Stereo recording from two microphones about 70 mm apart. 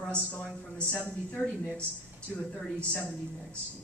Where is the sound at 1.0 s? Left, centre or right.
Centre.